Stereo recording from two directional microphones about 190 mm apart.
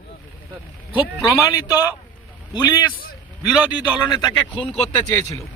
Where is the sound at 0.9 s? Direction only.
20° left (ahead or behind).